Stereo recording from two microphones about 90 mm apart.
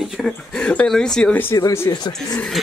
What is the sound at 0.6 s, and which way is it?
Speech, 10° left (ahead or behind).